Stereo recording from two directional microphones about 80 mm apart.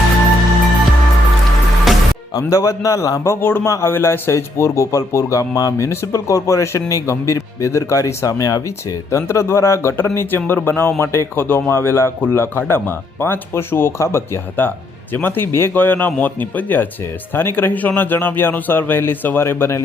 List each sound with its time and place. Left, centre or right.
1.9 s music: centre
2.5 s a man's voice: left
10.2 s speech: left